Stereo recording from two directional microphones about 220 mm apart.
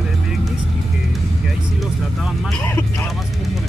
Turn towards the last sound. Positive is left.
turn(degrees=10)  # may be behind; listen again after turning